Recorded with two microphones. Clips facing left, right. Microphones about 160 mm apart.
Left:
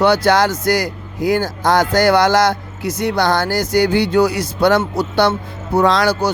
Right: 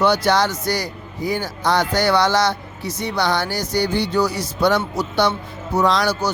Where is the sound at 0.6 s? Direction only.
90° left.